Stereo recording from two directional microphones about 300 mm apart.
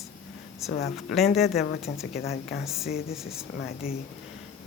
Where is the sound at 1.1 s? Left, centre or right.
Centre.